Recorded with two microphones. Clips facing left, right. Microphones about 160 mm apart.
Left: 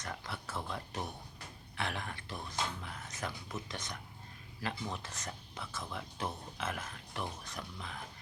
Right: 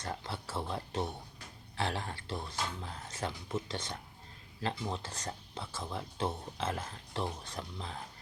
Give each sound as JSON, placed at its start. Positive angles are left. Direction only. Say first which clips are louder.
{"t": 0.0, "sound": "speech", "louder": "right 3 dB", "side_deg": -30}